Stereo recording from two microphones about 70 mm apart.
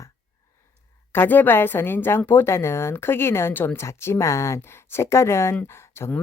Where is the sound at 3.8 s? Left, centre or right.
Left.